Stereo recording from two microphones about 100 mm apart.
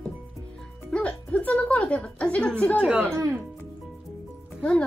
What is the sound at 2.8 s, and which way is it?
Speech, 10° right (ahead or behind).